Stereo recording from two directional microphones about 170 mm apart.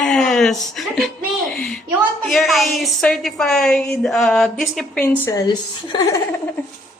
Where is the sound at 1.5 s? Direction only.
5° left (ahead or behind).